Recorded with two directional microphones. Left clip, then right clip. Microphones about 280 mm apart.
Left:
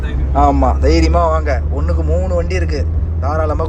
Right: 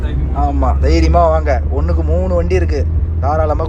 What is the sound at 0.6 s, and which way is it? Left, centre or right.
A man's voice, centre.